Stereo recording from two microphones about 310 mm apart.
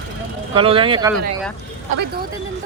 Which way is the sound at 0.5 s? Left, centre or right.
Centre.